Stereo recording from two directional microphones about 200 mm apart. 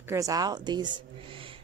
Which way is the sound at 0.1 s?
15° right (ahead or behind).